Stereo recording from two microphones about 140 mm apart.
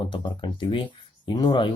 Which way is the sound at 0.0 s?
35° left (ahead or behind).